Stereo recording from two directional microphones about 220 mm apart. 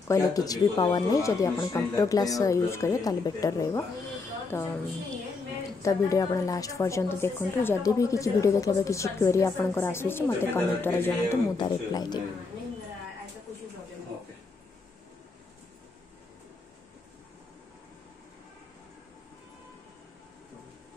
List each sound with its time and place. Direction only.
0.1 s a woman's voice: 15° left (ahead or behind)
5.8 s a woman's voice: 15° left (ahead or behind)